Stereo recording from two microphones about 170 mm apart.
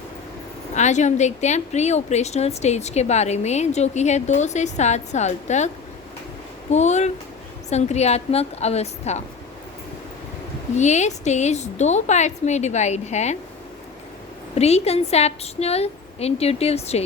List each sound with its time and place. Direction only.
0.7 s a woman's voice: 45° left (ahead or behind)
10.8 s a woman's voice: 40° left (ahead or behind)
14.5 s a woman's voice: 40° left (ahead or behind)